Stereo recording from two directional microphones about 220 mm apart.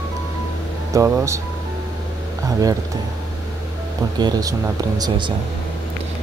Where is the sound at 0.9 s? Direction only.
15° right (ahead or behind).